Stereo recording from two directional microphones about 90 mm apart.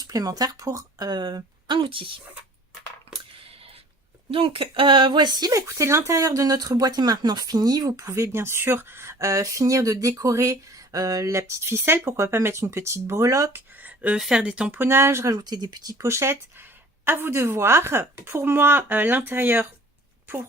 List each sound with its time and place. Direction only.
0.0 s speech: 40° right (ahead or behind)
1.6 s a woman's voice: 65° right (ahead or behind)
4.3 s speech: 90° right; by 13.6 s 35° right (ahead or behind)
13.7 s a sound: 15° right (ahead or behind)
14.2 s speech: 10° right (ahead or behind)
14.8 s speech: 25° right (ahead or behind)
15.4 s speech: 50° right (ahead or behind)
16.0 s speech: 30° right (ahead or behind)